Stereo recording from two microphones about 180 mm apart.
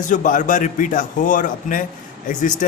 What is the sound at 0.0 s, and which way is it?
A man's voice, 45° left (ahead or behind).